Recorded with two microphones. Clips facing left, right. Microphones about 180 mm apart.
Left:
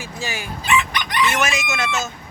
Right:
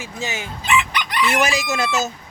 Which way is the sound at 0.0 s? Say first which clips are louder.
Right 1 dB; 20° right (ahead or behind).